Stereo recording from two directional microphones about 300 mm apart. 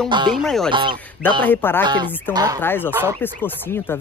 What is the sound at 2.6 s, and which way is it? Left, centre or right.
Speech, centre.